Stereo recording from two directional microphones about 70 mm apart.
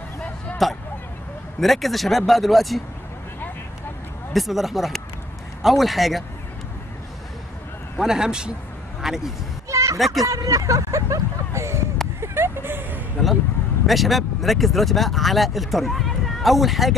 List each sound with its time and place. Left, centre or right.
0.6 s speech: centre
4.3 s speech: centre
8.0 s speech: centre
9.7 s a sound: right
9.9 s speech: centre
10.2 s speech: right
12.2 s vehicle: right
13.8 s speech: centre